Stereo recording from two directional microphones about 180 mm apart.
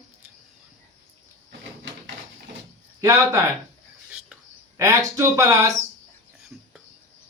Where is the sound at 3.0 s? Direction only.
20° right (ahead or behind).